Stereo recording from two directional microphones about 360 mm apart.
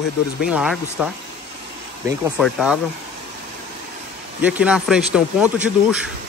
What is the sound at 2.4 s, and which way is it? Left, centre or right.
Speech, centre.